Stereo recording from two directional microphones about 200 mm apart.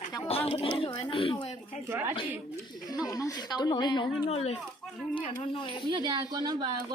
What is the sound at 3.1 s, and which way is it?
A woman's voice, 15° left (ahead or behind).